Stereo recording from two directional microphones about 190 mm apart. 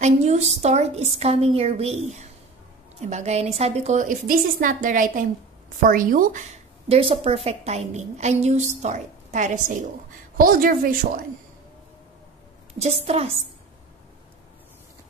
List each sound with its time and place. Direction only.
0.0 s a woman's voice: 35° right (ahead or behind)
6.9 s a woman's voice: 30° right (ahead or behind); by 11.2 s 50° right (ahead or behind)
12.8 s a woman's voice: 35° right (ahead or behind)